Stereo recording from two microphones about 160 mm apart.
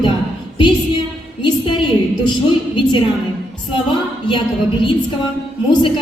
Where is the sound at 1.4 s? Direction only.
30° left (ahead or behind).